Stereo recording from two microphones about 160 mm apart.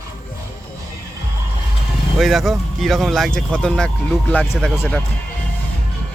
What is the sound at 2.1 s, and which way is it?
Speech, centre (ahead or behind).